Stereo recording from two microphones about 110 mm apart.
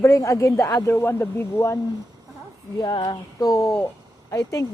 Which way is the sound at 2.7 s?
40° left (ahead or behind).